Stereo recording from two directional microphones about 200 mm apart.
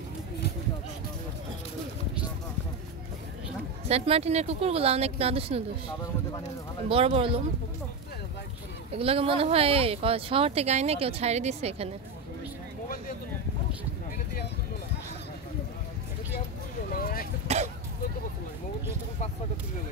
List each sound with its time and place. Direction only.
3.9 s speech: 30° right (ahead or behind)
6.9 s speech: 30° right (ahead or behind)
8.9 s speech: 30° right (ahead or behind)
16.9 s a sound: 45° left (ahead or behind)
17.5 s throat clearing: 30° right (ahead or behind)